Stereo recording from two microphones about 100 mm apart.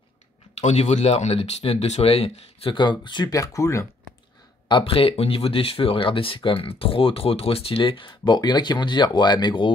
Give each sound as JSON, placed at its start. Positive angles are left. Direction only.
{"t": 0.6, "sound": "speech", "side_deg": 90}
{"t": 2.7, "sound": "speech", "side_deg": 50}
{"t": 3.3, "sound": "speech", "side_deg": 30}
{"t": 4.6, "sound": "speech", "side_deg": 60}